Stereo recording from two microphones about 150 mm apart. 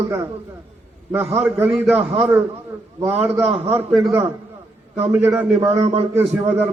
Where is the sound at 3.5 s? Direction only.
45° right (ahead or behind).